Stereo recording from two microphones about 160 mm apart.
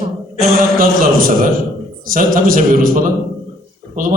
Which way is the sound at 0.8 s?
65° right (ahead or behind).